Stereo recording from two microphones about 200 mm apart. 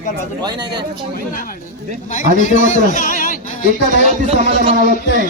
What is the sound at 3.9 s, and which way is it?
Speech, 35° right (ahead or behind).